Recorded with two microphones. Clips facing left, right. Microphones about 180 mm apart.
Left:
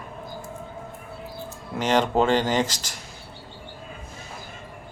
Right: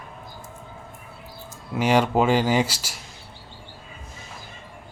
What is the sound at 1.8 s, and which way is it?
Speech, 10° right (ahead or behind).